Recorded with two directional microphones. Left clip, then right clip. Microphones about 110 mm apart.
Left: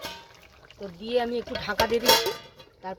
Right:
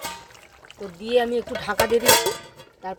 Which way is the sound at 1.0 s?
30° right (ahead or behind).